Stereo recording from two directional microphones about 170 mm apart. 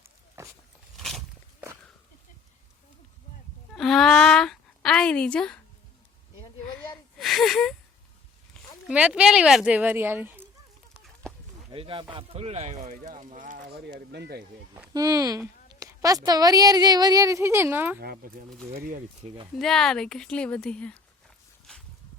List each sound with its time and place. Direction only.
3.8 s a sound: centre (ahead or behind)
7.2 s speech: centre (ahead or behind)
8.9 s a woman's voice: 5° right (ahead or behind)
10.9 s a sound: centre (ahead or behind)
11.7 s speech: 30° right (ahead or behind); by 13.7 s 50° right (ahead or behind)
14.1 s speech: 75° right (ahead or behind)
14.9 s a woman's voice: 20° right (ahead or behind)
18.0 s speech: 60° right (ahead or behind)
19.2 s speech: 35° right (ahead or behind)
19.5 s a woman's voice: centre (ahead or behind)